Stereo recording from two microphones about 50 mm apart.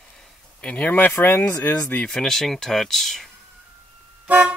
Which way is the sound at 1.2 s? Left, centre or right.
Left.